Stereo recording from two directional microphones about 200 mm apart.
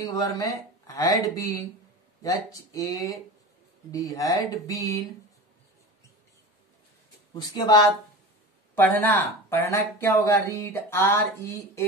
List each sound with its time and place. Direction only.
0.0 s speech: 20° left (ahead or behind)
2.7 s speech: 15° left (ahead or behind)
7.3 s speech: 20° left (ahead or behind)
9.0 s speech: 10° left (ahead or behind)